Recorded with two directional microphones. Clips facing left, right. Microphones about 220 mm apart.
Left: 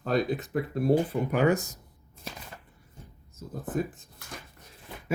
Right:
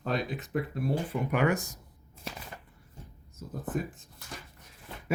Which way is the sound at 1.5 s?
20° left (ahead or behind).